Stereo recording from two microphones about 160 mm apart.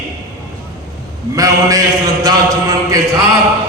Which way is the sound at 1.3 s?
20° right (ahead or behind).